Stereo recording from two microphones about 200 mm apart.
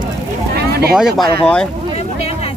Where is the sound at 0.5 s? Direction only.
50° right (ahead or behind).